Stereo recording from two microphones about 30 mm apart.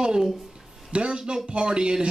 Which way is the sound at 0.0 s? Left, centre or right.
Right.